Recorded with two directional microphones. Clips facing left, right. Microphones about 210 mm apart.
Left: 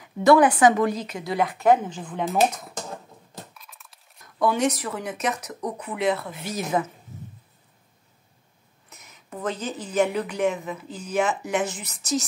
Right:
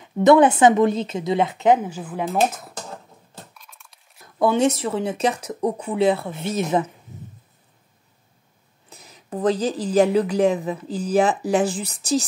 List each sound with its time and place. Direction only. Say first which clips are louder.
0.0 s speech: right 3 dB; 25° right (ahead or behind)
1.8 s speech: right 2 dB; 10° right (ahead or behind)
3.5 s coin: even; centre (ahead or behind)
4.4 s speech: right 4 dB; 25° right (ahead or behind)
8.8 s speech: right 5 dB; 30° right (ahead or behind)